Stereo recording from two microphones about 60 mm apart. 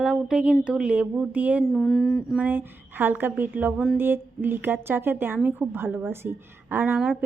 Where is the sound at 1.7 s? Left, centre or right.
Centre.